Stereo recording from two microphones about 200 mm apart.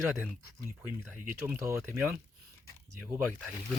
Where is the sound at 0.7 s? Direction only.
10° right (ahead or behind).